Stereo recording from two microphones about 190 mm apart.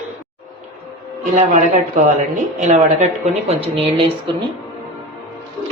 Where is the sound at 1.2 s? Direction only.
40° right (ahead or behind).